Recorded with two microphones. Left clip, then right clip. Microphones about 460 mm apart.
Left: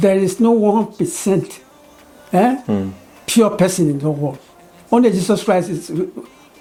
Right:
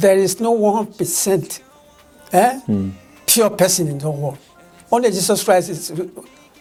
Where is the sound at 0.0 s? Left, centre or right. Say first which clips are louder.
Right 1 dB; right.